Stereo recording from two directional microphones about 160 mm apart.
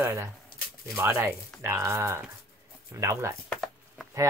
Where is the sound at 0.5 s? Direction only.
70° left (ahead or behind).